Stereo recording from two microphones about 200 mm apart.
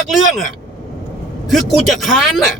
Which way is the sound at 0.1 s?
Centre (ahead or behind).